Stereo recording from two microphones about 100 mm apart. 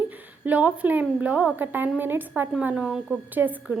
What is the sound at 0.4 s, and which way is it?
A woman's voice, 15° right (ahead or behind).